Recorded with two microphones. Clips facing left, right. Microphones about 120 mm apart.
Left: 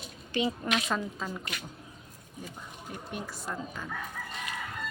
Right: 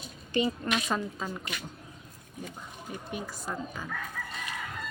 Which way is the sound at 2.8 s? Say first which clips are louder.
Right 1 dB; centre (ahead or behind).